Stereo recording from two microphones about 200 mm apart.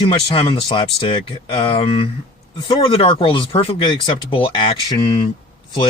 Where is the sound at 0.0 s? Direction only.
25° left (ahead or behind).